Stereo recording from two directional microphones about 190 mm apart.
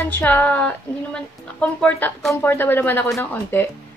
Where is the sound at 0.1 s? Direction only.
10° left (ahead or behind).